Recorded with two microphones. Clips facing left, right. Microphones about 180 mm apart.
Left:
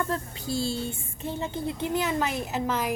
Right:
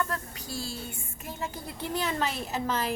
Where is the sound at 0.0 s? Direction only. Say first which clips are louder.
Left 3 dB; 25° left (ahead or behind).